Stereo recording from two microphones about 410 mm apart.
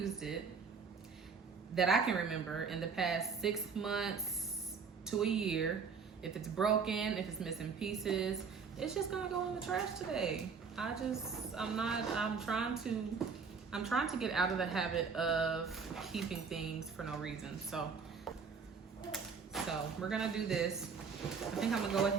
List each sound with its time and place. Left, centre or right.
0.0 s speech: centre
1.7 s a woman's voice: centre
18.3 s a sound: centre
19.1 s a woman's voice: centre